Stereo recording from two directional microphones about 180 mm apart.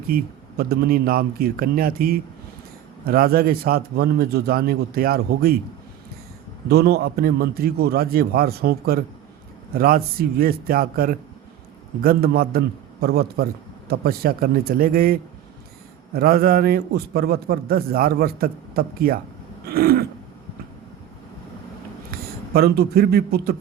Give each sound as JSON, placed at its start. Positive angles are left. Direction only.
{"t": 0.1, "sound": "a man's voice", "side_deg": -60}
{"t": 6.7, "sound": "a man's voice", "side_deg": -60}
{"t": 22.1, "sound": "speech", "side_deg": -60}